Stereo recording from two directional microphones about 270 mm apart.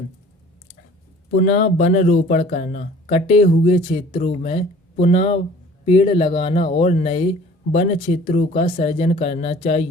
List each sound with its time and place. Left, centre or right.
1.4 s speech: left